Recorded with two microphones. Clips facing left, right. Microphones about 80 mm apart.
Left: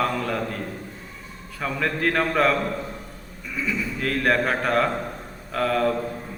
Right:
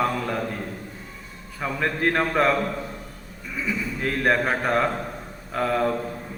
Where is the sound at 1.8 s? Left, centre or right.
Right.